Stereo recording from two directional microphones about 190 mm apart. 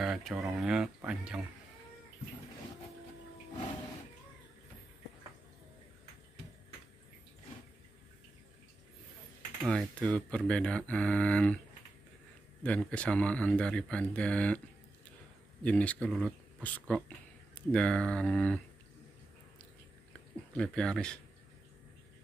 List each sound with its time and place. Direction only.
0.0 s speech: centre (ahead or behind)
9.7 s speech: 5° left (ahead or behind)
12.6 s speech: 5° left (ahead or behind)
15.6 s speech: 5° left (ahead or behind)
20.5 s speech: 5° left (ahead or behind)